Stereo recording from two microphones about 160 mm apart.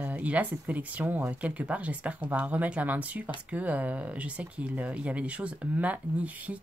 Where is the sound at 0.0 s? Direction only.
10° right (ahead or behind).